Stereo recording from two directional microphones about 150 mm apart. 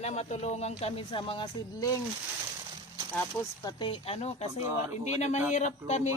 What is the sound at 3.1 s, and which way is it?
Speech, 15° left (ahead or behind).